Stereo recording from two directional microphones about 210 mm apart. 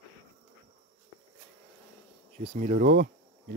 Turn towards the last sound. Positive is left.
turn(degrees=-40)  # may be behind; listen again after turning